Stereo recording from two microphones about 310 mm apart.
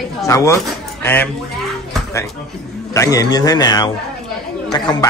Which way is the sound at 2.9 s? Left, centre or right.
Centre.